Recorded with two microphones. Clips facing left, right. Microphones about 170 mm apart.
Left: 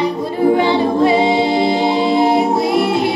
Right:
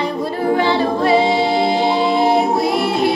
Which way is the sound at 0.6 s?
20° left (ahead or behind).